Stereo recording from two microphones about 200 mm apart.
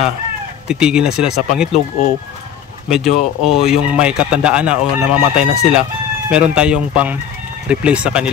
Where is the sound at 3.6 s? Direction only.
5° right (ahead or behind).